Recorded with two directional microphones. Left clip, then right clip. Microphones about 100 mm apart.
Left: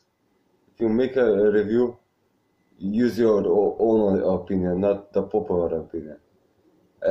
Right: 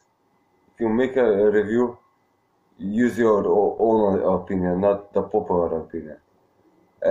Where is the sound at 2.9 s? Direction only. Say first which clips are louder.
Right 1 dB; 20° left (ahead or behind).